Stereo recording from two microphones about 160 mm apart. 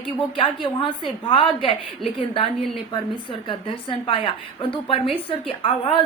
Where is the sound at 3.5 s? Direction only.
30° left (ahead or behind).